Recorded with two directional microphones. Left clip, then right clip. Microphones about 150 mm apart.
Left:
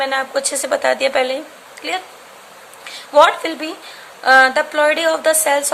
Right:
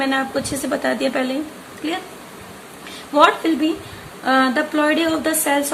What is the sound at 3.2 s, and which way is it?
A woman's voice, 35° left (ahead or behind).